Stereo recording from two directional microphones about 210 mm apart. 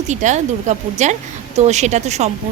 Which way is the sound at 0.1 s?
35° right (ahead or behind).